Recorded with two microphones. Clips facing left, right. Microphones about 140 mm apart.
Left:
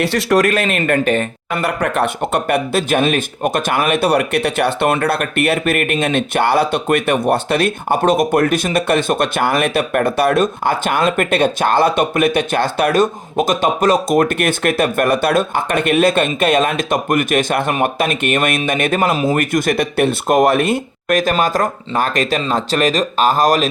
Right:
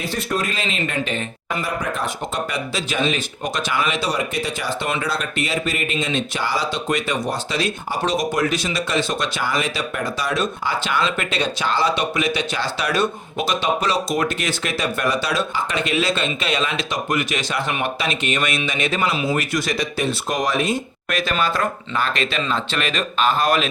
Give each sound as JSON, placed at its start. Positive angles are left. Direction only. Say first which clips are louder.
{"t": 0.0, "sound": "speech", "louder": "left 10 dB", "side_deg": 75}